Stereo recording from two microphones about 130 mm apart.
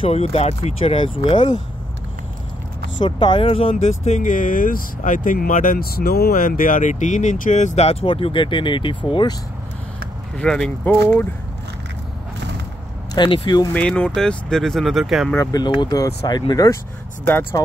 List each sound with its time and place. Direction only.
0.0 s speech: 50° left (ahead or behind)
3.0 s speech: 35° left (ahead or behind)
3.7 s speech: 60° left (ahead or behind); by 9.3 s 40° left (ahead or behind)
10.3 s speech: 5° left (ahead or behind)
13.1 s speech: 35° left (ahead or behind)
13.7 s speech: 10° left (ahead or behind)
15.3 s speech: 25° left (ahead or behind)
17.3 s speech: 15° left (ahead or behind)